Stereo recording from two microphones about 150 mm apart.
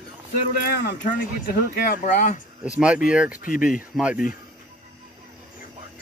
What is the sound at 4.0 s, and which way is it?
Speech, 5° right (ahead or behind).